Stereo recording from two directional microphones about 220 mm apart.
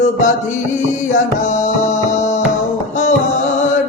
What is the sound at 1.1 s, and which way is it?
Music, 35° left (ahead or behind).